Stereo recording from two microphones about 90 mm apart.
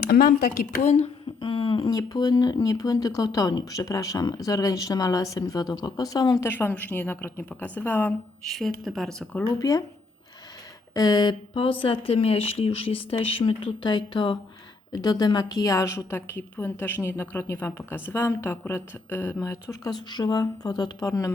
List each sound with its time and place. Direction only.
1.4 s a sound: 70° left (ahead or behind)
1.9 s speech: 50° left (ahead or behind)
6.4 s speech: 25° left (ahead or behind)
8.4 s a woman's voice: centre (ahead or behind)
9.4 s a woman's voice: 40° left (ahead or behind)
10.9 s speech: 45° left (ahead or behind); by 14.3 s 60° left (ahead or behind)
14.9 s a woman's voice: 50° left (ahead or behind); by 19.9 s 35° left (ahead or behind)
20.1 s speech: 50° left (ahead or behind)
21.1 s a woman's voice: 35° left (ahead or behind)